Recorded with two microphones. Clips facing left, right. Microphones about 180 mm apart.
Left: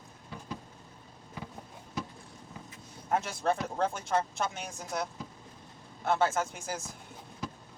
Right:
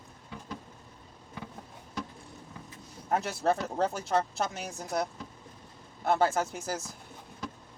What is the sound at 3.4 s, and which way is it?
Speech, 35° right (ahead or behind).